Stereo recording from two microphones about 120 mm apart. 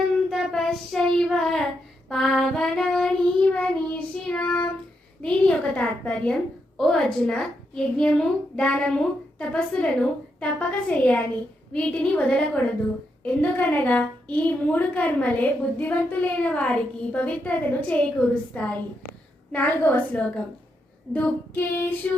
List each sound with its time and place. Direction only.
0.3 s child singing: centre (ahead or behind)
5.2 s a woman's voice: 10° left (ahead or behind)